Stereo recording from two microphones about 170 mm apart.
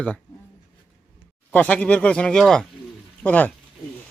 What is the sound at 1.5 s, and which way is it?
Speech, 10° left (ahead or behind).